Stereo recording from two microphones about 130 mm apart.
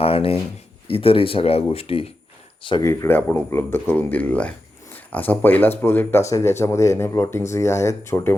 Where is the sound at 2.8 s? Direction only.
20° left (ahead or behind).